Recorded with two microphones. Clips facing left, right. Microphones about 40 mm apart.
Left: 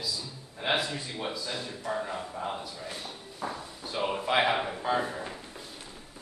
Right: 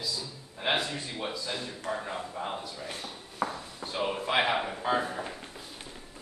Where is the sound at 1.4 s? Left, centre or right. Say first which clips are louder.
Even; centre.